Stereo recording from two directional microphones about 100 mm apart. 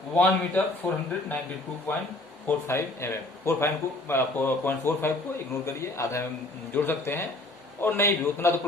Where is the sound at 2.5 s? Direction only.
25° left (ahead or behind).